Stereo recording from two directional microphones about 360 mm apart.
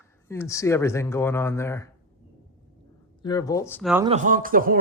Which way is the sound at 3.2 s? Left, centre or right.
Centre.